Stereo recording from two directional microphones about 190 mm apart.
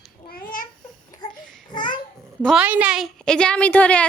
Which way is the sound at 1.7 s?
25° left (ahead or behind).